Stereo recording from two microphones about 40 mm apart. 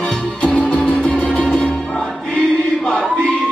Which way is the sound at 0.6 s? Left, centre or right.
Left.